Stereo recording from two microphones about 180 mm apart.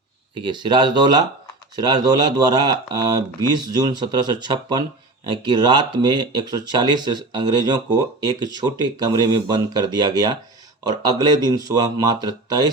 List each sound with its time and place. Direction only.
0.4 s speech: 25° right (ahead or behind)